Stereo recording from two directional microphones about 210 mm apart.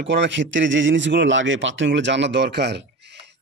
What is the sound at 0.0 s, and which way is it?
Speech, 55° right (ahead or behind).